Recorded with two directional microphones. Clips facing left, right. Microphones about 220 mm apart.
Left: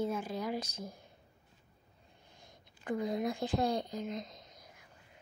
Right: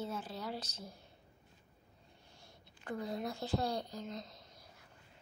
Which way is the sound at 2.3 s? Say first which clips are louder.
Left 2 dB; 15° left (ahead or behind).